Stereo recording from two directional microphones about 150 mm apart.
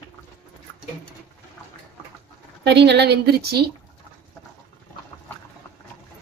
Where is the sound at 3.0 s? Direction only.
90° right.